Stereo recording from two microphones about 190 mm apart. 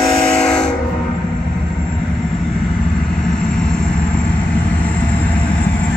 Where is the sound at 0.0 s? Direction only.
5° left (ahead or behind).